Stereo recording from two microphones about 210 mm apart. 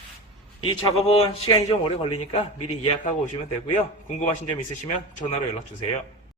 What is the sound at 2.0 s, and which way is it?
Speech, 90° left.